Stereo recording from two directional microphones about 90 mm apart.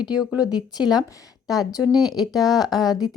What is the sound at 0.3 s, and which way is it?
Speech, 50° left (ahead or behind).